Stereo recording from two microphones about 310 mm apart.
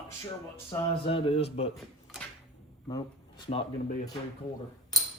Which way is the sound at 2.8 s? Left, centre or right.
Centre.